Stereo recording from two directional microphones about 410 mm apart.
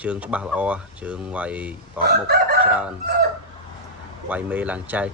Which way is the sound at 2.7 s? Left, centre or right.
Centre.